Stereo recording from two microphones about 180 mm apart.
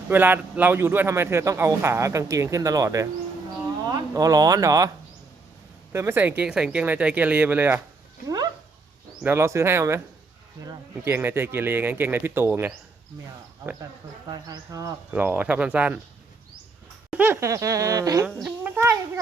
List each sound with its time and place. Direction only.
0.1 s a man's voice: 10° right (ahead or behind)
5.9 s a man's voice: 15° right (ahead or behind)
9.2 s a man's voice: 15° right (ahead or behind)
14.3 s a man's voice: 20° right (ahead or behind)
17.1 s a man's voice: 10° right (ahead or behind)
18.3 s speech: centre (ahead or behind)
18.8 s a child's voice: 20° right (ahead or behind)